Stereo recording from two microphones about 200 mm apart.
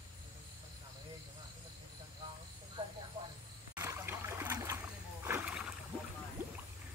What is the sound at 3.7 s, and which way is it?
Trickle, 10° right (ahead or behind).